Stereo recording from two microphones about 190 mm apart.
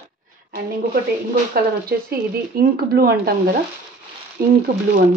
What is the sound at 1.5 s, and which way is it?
Speech, 55° right (ahead or behind).